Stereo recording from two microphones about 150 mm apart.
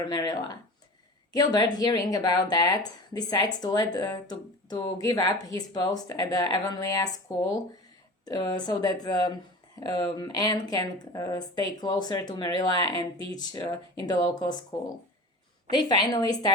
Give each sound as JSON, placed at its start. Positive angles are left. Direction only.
{"t": 0.1, "sound": "speech", "side_deg": 25}